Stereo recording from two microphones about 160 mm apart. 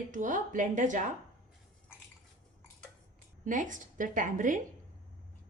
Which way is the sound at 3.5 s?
55° right (ahead or behind).